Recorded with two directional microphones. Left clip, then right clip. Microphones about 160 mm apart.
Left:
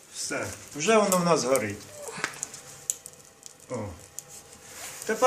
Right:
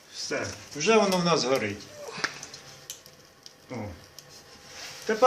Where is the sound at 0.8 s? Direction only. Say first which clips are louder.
Even; 15° right (ahead or behind).